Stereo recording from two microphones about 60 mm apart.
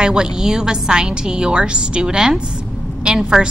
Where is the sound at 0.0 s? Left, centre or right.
Centre.